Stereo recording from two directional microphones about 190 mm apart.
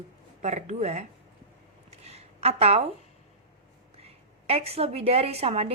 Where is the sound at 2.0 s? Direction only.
35° right (ahead or behind).